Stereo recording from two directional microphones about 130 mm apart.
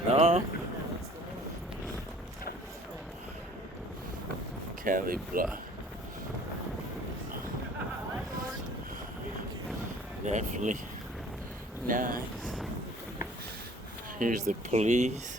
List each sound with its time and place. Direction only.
0.1 s a sound: 50° right (ahead or behind)
4.8 s speech: 90° right
10.2 s speech: 70° right (ahead or behind)
11.9 s speech: 90° right
14.2 s speech: 80° right; by 15.2 s 65° right (ahead or behind)